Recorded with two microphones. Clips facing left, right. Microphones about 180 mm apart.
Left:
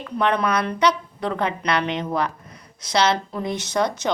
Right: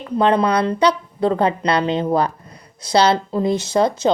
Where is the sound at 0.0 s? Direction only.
30° right (ahead or behind).